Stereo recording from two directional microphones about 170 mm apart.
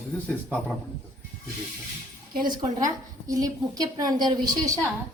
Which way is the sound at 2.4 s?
25° right (ahead or behind).